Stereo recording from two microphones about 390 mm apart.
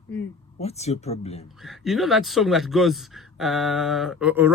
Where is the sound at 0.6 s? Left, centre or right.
Centre.